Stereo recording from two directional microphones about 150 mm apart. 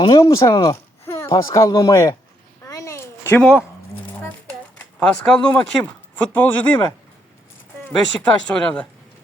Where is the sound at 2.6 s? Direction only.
20° left (ahead or behind).